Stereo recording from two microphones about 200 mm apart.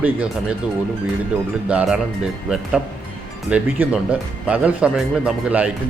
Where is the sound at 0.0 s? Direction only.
5° right (ahead or behind).